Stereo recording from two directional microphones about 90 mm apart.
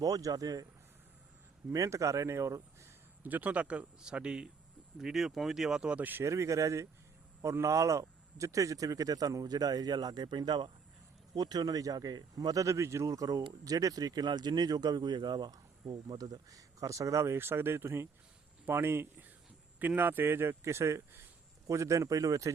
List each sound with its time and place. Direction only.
0.0 s speech: 40° right (ahead or behind)
1.7 s speech: 35° right (ahead or behind)
3.2 s speech: 15° right (ahead or behind)
6.2 s speech: 35° right (ahead or behind)